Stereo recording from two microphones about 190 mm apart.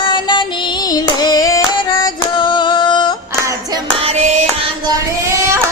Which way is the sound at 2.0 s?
25° left (ahead or behind).